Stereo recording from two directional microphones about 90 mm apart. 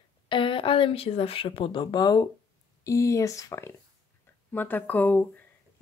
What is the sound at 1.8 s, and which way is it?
Speech, 50° left (ahead or behind).